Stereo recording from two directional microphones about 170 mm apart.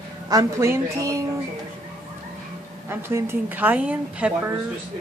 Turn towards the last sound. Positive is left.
turn(degrees=-10)  # may be behind; listen again after turning